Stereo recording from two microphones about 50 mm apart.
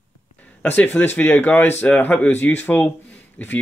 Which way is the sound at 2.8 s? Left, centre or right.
Left.